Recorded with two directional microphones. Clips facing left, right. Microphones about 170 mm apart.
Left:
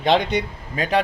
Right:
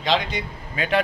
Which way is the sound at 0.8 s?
35° left (ahead or behind).